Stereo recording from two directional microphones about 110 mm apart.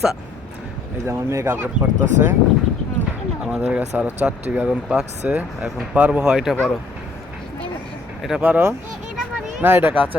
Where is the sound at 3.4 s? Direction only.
5° right (ahead or behind).